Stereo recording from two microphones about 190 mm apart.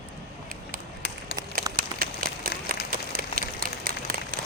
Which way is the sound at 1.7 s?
50° right (ahead or behind).